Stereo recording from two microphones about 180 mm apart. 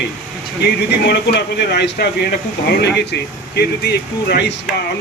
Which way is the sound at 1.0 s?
70° left (ahead or behind).